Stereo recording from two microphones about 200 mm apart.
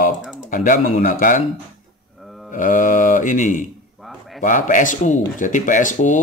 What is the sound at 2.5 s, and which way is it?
Speech, 40° left (ahead or behind).